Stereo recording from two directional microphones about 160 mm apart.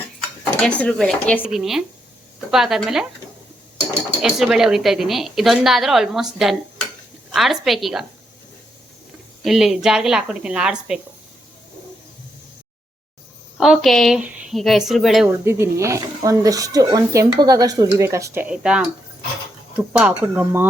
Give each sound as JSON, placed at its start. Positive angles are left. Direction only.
{"t": 0.6, "sound": "a woman's voice", "side_deg": 5}
{"t": 4.2, "sound": "a woman's voice", "side_deg": 0}
{"t": 9.4, "sound": "a woman's voice", "side_deg": 0}
{"t": 13.6, "sound": "a woman's voice", "side_deg": 0}
{"t": 15.4, "sound": "speech", "side_deg": -15}